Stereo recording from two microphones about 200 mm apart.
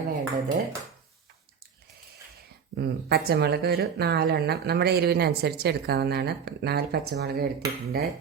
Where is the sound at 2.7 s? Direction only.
50° right (ahead or behind).